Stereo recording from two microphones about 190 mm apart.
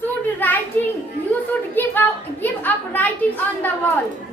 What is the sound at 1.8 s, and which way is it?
A woman's voice, 10° left (ahead or behind).